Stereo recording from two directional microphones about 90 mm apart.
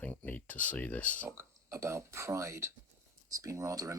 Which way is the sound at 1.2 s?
30° right (ahead or behind).